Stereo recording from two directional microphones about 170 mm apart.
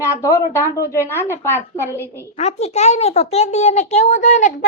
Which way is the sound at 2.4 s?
40° left (ahead or behind).